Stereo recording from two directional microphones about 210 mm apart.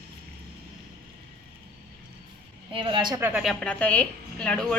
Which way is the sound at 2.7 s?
25° right (ahead or behind).